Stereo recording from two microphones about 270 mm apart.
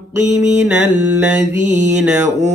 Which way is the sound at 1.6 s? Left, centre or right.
Right.